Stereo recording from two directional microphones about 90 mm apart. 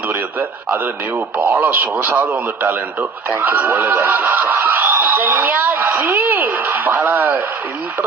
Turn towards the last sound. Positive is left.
turn(degrees=-20)  # may be behind; listen again after turning